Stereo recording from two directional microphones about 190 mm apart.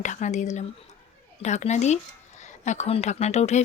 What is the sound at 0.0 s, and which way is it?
Speech, 40° left (ahead or behind).